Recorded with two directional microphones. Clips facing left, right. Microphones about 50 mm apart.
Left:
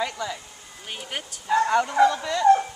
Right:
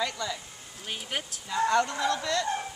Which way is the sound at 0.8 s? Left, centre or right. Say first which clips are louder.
Left 1 dB; centre.